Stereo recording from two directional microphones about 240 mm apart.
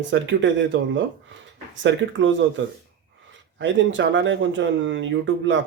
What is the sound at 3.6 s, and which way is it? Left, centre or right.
Speech, right.